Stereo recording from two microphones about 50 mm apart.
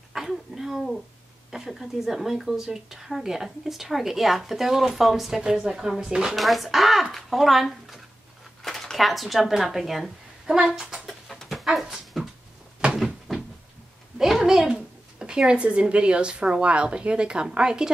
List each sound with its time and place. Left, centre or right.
0.1 s speech: centre
6.3 s speech: centre
11.1 s pant: centre
11.4 s a sound: centre
12.8 s cupboard open or close: right
13.3 s cupboard open or close: centre
14.1 s a sound: centre
14.7 s speech: centre